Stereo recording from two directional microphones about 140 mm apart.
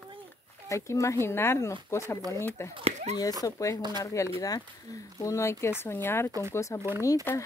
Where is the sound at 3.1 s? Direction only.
50° right (ahead or behind).